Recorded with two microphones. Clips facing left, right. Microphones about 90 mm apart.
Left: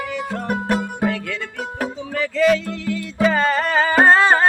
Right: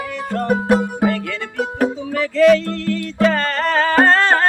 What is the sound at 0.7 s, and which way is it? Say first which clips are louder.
Music: right 5 dB; 15° right (ahead or behind).